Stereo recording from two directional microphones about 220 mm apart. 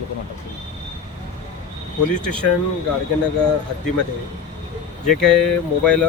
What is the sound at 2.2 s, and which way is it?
Speech, 5° left (ahead or behind).